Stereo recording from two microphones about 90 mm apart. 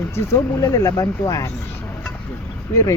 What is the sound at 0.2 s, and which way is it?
Speech, 40° left (ahead or behind).